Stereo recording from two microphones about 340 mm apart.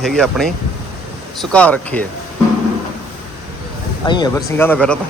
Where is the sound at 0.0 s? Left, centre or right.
Centre.